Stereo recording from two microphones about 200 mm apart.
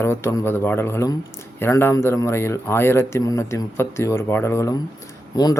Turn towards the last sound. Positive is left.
turn(degrees=20)  # may be behind; listen again after turning